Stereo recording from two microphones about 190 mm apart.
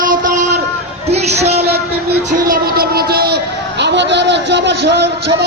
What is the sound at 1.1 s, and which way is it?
Music, 35° right (ahead or behind).